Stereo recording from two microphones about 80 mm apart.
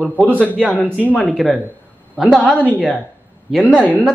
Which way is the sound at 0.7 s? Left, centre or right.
Centre.